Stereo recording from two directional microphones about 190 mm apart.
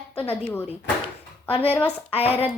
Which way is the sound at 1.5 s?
30° left (ahead or behind).